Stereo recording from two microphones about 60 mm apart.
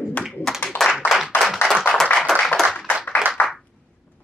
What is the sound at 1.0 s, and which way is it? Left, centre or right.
Clapping, centre.